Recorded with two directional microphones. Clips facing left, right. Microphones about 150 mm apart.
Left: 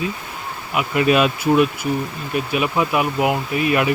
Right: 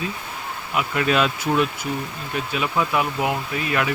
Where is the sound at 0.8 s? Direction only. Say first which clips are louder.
Left 4 dB; 10° left (ahead or behind).